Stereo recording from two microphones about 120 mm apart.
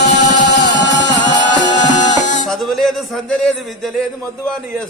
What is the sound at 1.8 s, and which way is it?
Music, 90° left.